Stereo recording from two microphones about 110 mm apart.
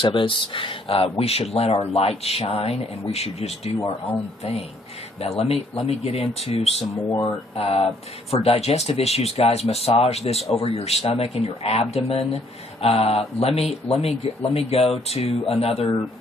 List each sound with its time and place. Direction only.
0.0 s speech: 50° left (ahead or behind); by 3.7 s 70° left (ahead or behind)
5.2 s speech: 65° left (ahead or behind)